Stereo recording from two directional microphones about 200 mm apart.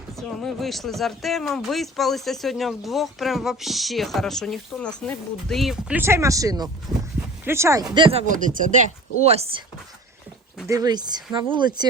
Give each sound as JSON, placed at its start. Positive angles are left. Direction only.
{"t": 0.2, "sound": "speech", "side_deg": 0}
{"t": 6.9, "sound": "a sound", "side_deg": 0}
{"t": 7.4, "sound": "speech", "side_deg": -15}
{"t": 7.9, "sound": "speech", "side_deg": -25}
{"t": 8.3, "sound": "speech", "side_deg": -40}
{"t": 10.7, "sound": "speech", "side_deg": -20}